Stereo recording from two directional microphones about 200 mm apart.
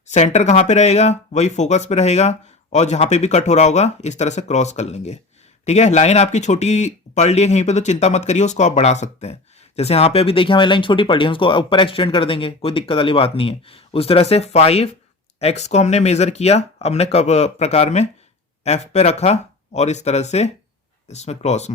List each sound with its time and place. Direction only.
0.1 s speech: 35° left (ahead or behind)